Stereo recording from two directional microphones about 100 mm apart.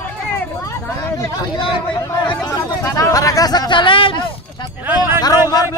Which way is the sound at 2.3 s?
35° left (ahead or behind).